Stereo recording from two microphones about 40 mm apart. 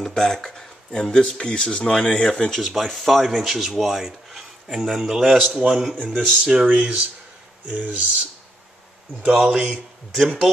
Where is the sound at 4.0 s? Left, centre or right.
Centre.